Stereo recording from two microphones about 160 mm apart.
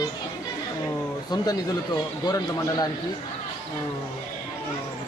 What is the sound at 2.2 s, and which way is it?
Speech, 25° left (ahead or behind).